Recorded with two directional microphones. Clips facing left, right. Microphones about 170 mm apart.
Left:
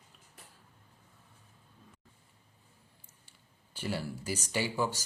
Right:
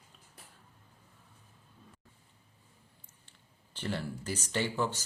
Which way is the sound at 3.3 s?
10° left (ahead or behind).